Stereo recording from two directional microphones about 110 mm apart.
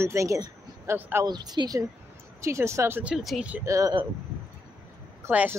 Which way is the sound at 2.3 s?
25° right (ahead or behind).